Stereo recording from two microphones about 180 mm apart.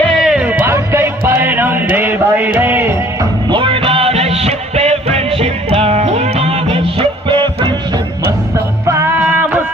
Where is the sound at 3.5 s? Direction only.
30° right (ahead or behind).